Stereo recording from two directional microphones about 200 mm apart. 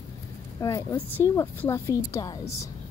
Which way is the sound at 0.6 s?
15° left (ahead or behind).